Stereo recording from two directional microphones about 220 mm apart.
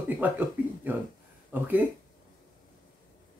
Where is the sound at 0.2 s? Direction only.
10° right (ahead or behind).